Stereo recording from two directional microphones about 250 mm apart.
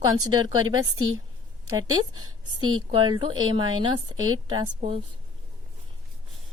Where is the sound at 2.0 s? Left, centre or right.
Centre.